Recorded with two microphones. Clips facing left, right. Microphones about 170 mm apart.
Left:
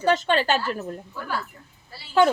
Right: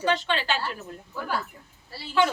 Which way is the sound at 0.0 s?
45° left (ahead or behind).